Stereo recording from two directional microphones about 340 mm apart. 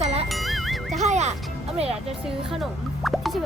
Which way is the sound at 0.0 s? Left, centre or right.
Centre.